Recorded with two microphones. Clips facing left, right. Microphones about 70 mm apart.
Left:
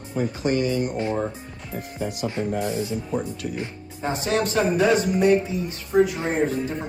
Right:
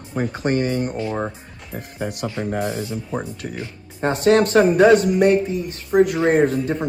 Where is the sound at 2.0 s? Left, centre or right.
Right.